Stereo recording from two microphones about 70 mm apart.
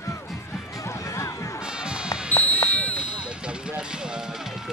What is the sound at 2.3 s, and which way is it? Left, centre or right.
Basketball bounce, left.